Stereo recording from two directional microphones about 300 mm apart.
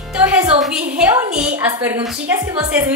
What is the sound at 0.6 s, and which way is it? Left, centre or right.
A woman's voice, centre.